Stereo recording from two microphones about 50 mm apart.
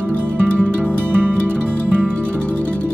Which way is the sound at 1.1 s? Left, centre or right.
Right.